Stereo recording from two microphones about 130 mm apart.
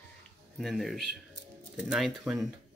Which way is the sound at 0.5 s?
Centre (ahead or behind).